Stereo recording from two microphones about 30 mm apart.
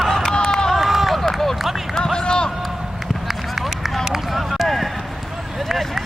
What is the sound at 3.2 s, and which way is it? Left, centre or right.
Run, centre.